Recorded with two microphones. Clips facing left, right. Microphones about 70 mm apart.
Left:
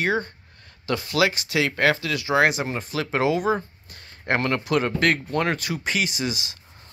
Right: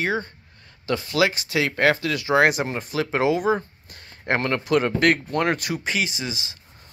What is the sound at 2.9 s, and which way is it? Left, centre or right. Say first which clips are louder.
Speech: right 1 dB; centre.